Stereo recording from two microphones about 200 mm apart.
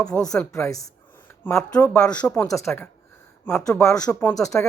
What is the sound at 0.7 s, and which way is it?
Speech, 15° left (ahead or behind).